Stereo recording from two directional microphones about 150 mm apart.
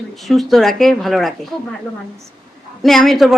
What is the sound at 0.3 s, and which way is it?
Speech, centre (ahead or behind).